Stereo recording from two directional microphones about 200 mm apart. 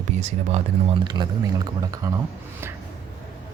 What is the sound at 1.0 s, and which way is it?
Speech, 20° right (ahead or behind).